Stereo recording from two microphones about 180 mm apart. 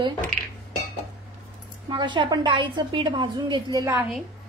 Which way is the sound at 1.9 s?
25° right (ahead or behind).